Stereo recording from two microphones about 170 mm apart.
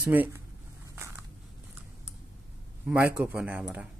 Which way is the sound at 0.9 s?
15° right (ahead or behind).